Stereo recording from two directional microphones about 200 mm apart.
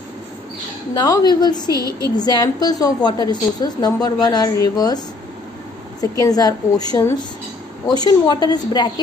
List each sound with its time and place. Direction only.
0.9 s a woman's voice: 20° left (ahead or behind)
1.8 s speech: 15° right (ahead or behind)
2.1 s a woman's voice: 20° left (ahead or behind)